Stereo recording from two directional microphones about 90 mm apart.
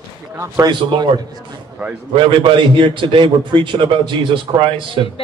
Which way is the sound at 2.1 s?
70° right (ahead or behind).